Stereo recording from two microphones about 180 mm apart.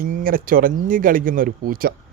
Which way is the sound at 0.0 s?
50° right (ahead or behind).